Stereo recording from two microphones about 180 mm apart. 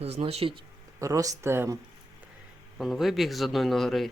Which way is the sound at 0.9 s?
20° right (ahead or behind).